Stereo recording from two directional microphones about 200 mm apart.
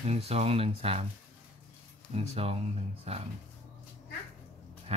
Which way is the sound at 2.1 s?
30° right (ahead or behind).